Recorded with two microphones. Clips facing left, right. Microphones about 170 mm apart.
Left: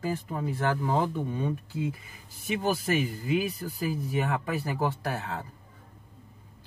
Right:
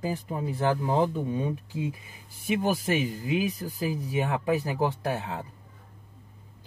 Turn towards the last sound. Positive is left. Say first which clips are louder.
# right 2 dB
turn(degrees=-15)  # may be behind; listen again after turning